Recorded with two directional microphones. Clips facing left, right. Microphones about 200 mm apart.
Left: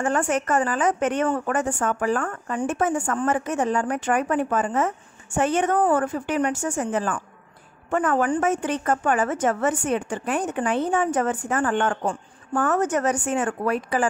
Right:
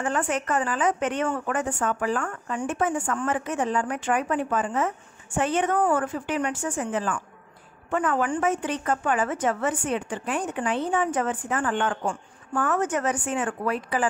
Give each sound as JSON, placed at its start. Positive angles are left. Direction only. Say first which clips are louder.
{"t": 0.0, "sound": "a woman's voice", "louder": "left 3 dB", "side_deg": 45}